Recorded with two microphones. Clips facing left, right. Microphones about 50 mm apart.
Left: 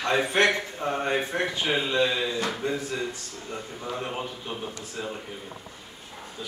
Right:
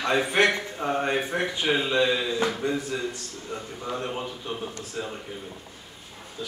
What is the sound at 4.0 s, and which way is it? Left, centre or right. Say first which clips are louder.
Speech: right 1 dB; centre.